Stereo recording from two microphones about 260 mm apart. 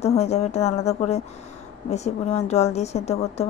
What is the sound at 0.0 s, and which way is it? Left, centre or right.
Speech, left.